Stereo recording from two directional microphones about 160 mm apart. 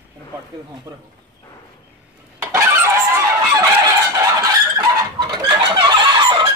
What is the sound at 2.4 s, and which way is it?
Fowl, 15° right (ahead or behind).